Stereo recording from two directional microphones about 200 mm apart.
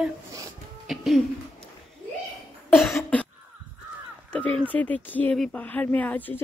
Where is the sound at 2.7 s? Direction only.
Centre (ahead or behind).